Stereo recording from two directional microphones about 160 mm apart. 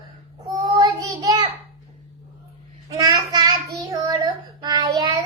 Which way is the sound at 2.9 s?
20° right (ahead or behind).